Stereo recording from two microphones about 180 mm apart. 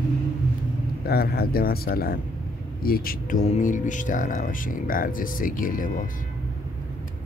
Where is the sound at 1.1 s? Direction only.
60° left (ahead or behind).